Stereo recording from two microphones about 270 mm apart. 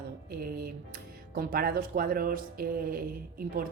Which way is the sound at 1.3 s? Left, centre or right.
Right.